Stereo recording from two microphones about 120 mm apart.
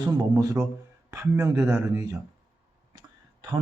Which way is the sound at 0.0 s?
30° right (ahead or behind).